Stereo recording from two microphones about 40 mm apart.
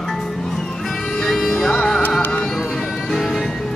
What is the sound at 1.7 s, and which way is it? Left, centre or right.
Music, centre.